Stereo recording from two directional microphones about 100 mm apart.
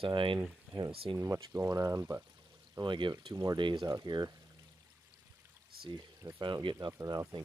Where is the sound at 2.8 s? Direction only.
55° right (ahead or behind).